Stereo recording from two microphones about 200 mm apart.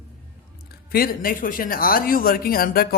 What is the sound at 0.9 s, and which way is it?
Speech, 45° left (ahead or behind).